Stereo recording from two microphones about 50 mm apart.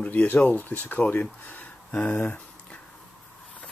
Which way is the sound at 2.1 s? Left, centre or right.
Left.